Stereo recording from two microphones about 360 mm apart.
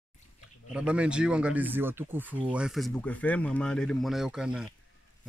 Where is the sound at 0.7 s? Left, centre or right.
Centre.